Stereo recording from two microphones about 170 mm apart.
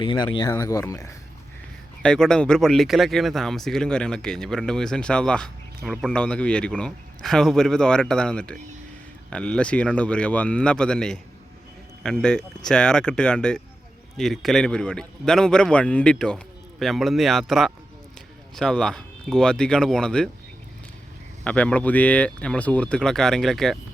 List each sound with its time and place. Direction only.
0.0 s speech: 25° left (ahead or behind)
2.0 s speech: 5° left (ahead or behind)
12.2 s speech: 5° left (ahead or behind)
21.4 s speech: 5° left (ahead or behind)